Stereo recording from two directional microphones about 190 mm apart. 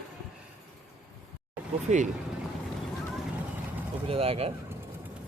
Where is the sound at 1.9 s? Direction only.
40° right (ahead or behind).